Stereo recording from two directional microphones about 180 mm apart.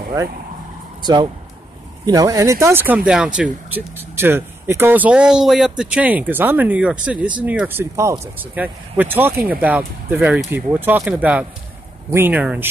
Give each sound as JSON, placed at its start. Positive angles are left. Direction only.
{"t": 1.0, "sound": "speech", "side_deg": -25}